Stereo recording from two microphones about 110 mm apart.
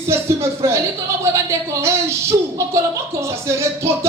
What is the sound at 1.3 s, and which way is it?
Speech, 25° right (ahead or behind).